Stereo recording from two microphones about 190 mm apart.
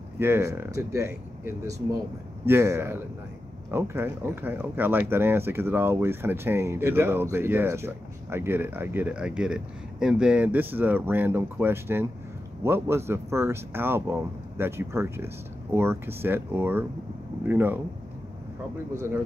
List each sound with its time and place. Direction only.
0.2 s speech: 15° right (ahead or behind)